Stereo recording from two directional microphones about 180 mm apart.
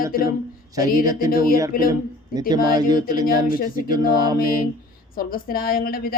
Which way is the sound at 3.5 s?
50° left (ahead or behind).